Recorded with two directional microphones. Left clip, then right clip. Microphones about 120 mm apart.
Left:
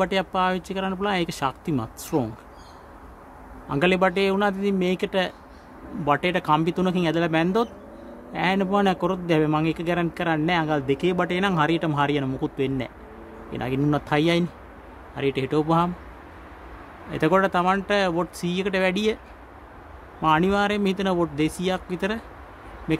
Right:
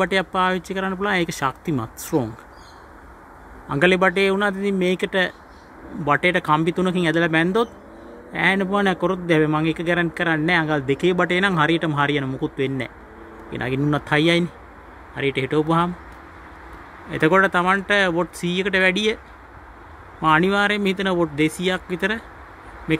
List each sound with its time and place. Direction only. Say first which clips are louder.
0.0 s speech: right 3 dB; 20° right (ahead or behind)
3.6 s a man's voice: right 4 dB; 20° right (ahead or behind)
17.1 s a man's voice: right 4 dB; 15° right (ahead or behind)
20.2 s a man's voice: right 3 dB; 15° right (ahead or behind)